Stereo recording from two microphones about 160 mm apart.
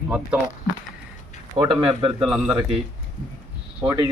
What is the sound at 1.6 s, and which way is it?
Speech, 40° right (ahead or behind).